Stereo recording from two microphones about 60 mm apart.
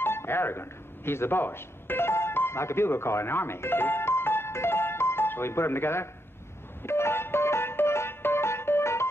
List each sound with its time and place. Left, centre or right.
0.0 s music: left